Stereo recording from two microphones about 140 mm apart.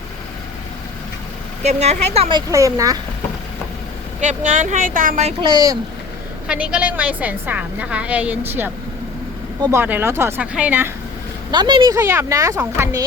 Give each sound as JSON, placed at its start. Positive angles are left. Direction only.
{"t": 1.6, "sound": "a woman's voice", "side_deg": -50}
{"t": 2.5, "sound": "speech", "side_deg": -25}
{"t": 4.2, "sound": "speech", "side_deg": -65}
{"t": 5.4, "sound": "speech", "side_deg": -30}
{"t": 6.5, "sound": "a woman's voice", "side_deg": -5}
{"t": 9.7, "sound": "a woman's voice", "side_deg": -15}
{"t": 11.5, "sound": "speech", "side_deg": -30}
{"t": 11.9, "sound": "a woman's voice", "side_deg": -20}